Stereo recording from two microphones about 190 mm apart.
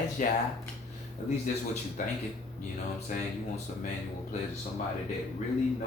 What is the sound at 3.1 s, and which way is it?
Speech, 45° left (ahead or behind).